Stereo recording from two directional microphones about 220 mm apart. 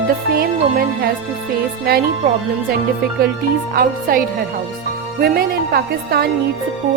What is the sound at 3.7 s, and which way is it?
A woman's voice, 40° right (ahead or behind).